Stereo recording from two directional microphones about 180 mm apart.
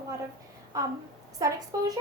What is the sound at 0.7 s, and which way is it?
Speech, 20° right (ahead or behind).